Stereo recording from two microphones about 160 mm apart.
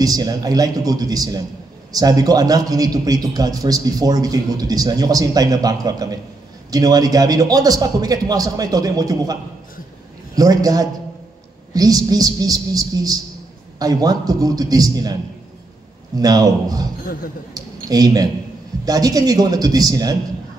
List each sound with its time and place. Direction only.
0.0 s a man's voice: 25° right (ahead or behind)
16.2 s a man's voice: 25° right (ahead or behind)
17.0 s speech: 65° left (ahead or behind)
17.6 s a sound: 25° right (ahead or behind)
18.9 s a man's voice: 20° right (ahead or behind)